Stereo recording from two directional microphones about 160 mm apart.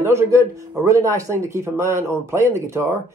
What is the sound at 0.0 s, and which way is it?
A man's voice, 15° right (ahead or behind).